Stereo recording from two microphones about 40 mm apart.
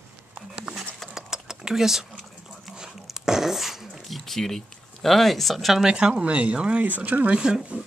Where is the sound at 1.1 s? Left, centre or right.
Centre.